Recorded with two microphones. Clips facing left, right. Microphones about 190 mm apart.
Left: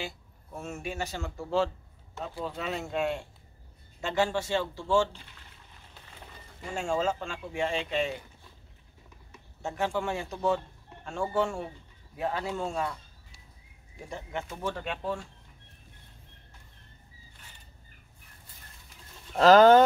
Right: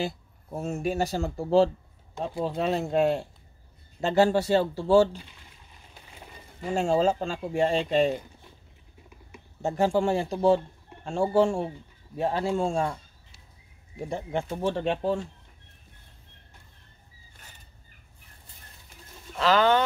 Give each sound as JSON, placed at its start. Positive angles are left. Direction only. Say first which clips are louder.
{"t": 0.0, "sound": "speech", "louder": "right 8 dB", "side_deg": -35}
{"t": 5.9, "sound": "a sound", "louder": "right 2 dB", "side_deg": -10}
{"t": 6.7, "sound": "speech", "louder": "right 6 dB", "side_deg": -35}
{"t": 9.6, "sound": "speech", "louder": "right 7 dB", "side_deg": -35}
{"t": 14.0, "sound": "speech", "louder": "right 7 dB", "side_deg": -30}
{"t": 19.3, "sound": "speech", "louder": "left 5 dB", "side_deg": 40}